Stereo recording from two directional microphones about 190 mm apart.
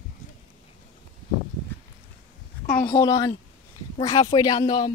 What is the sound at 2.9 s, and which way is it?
Speech, 20° left (ahead or behind).